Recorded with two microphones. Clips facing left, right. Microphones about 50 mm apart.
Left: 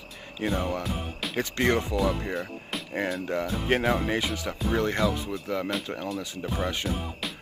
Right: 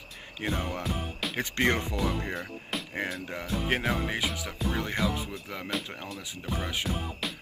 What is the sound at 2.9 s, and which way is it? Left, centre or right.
Speech, centre.